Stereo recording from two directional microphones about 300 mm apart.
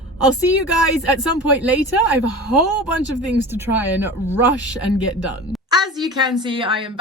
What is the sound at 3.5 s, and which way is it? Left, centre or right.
Speech, centre.